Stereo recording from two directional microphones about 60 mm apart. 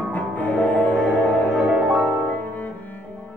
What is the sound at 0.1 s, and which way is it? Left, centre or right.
Music, left.